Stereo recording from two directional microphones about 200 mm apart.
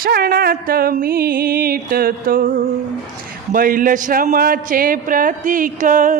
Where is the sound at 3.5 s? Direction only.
45° right (ahead or behind).